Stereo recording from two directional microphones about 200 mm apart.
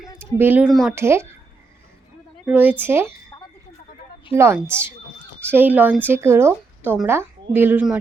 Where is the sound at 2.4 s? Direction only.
10° right (ahead or behind).